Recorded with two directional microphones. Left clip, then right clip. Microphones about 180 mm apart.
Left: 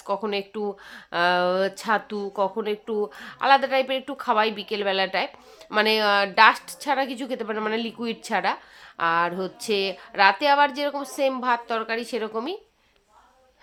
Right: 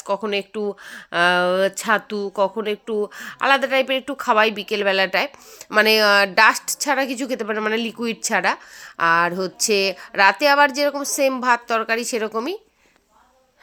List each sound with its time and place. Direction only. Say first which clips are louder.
0.0 s speech: right 4 dB; 15° right (ahead or behind)